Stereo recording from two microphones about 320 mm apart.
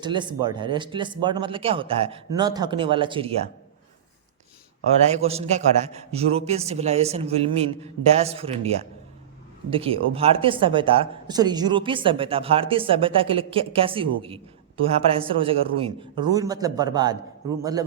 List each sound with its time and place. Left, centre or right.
0.0 s speech: centre
5.1 s a man's voice: centre